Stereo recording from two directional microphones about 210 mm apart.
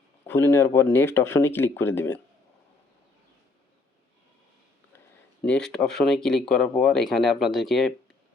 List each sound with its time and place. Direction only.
0.3 s speech: 10° left (ahead or behind)
5.4 s speech: 5° left (ahead or behind)